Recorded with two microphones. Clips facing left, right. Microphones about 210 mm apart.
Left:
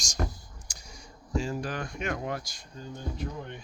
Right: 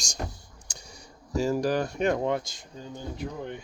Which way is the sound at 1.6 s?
40° right (ahead or behind).